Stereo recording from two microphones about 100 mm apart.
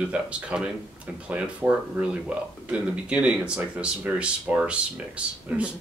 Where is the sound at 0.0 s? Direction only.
10° right (ahead or behind).